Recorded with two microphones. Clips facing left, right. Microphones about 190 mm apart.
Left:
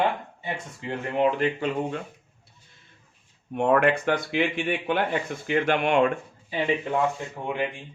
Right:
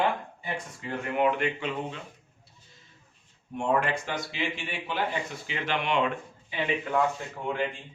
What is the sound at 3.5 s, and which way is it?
Speech, 60° left (ahead or behind).